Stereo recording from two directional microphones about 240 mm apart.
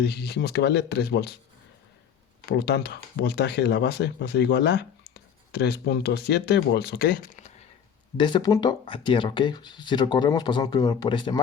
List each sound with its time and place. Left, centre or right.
0.0 s speech: left
2.5 s speech: left
8.2 s speech: centre